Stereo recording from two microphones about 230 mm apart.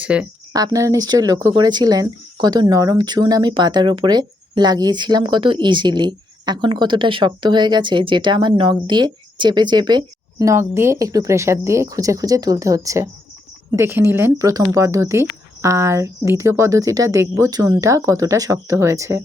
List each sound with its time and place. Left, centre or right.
0.0 s speech: centre
0.5 s speech: centre